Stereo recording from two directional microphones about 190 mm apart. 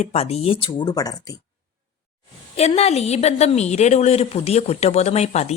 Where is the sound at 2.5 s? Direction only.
35° left (ahead or behind).